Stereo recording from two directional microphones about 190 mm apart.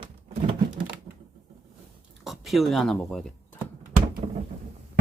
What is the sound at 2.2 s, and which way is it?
Speech, centre (ahead or behind).